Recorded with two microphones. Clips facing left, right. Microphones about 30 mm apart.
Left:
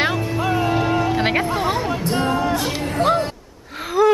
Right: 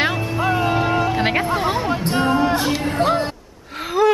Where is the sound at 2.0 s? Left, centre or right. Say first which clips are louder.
Right 3 dB; centre.